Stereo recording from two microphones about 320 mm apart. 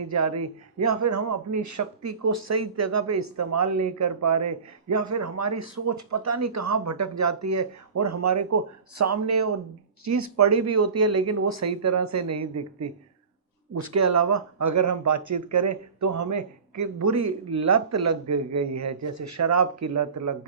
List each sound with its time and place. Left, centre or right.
0.1 s a man's voice: right